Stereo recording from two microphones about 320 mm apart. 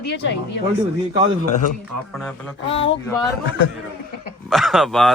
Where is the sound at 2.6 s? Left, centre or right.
Centre.